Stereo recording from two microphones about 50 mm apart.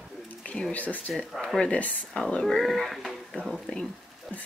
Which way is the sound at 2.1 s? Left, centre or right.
Centre.